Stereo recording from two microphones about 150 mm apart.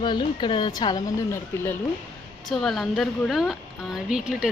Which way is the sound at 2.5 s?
Centre (ahead or behind).